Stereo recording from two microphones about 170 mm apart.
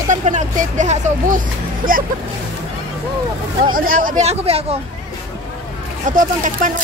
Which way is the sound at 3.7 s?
55° right (ahead or behind).